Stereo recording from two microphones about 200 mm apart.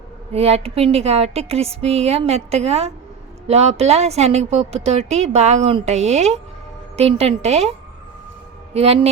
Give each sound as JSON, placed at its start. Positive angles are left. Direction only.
{"t": 0.3, "sound": "a woman's voice", "side_deg": -30}
{"t": 8.7, "sound": "a woman's voice", "side_deg": -30}